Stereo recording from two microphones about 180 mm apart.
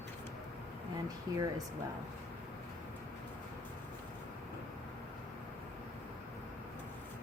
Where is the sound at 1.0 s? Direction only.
20° right (ahead or behind).